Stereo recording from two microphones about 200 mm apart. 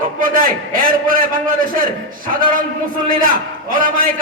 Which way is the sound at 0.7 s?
45° right (ahead or behind).